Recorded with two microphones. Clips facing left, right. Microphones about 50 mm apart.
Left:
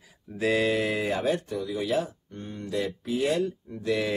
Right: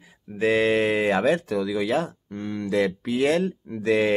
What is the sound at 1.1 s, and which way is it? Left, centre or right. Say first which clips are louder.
Speech: right 6 dB; right.